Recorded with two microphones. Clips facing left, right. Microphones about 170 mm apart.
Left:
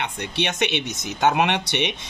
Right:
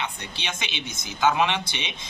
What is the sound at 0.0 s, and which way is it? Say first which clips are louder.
Speech: left 7 dB; 65° left (ahead or behind).